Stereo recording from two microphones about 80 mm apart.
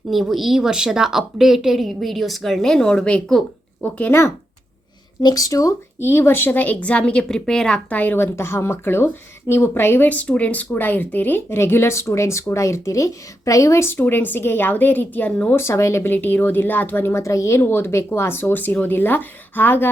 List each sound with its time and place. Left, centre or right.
0.1 s a woman's voice: centre
5.2 s speech: left
6.0 s a woman's voice: left; by 7.9 s centre
7.9 s speech: left
13.9 s speech: left
15.5 s speech: left
16.1 s speech: left
17.6 s speech: left